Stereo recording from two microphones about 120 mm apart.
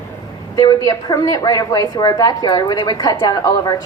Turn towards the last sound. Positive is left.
turn(degrees=30)  # may be behind; listen again after turning